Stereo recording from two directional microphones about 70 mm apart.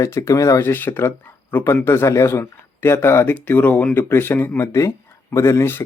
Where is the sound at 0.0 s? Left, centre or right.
Left.